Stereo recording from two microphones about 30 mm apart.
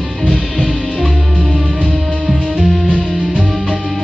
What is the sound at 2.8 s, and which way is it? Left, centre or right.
Music, left.